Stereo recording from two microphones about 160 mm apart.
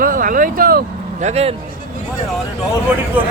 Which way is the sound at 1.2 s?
45° right (ahead or behind).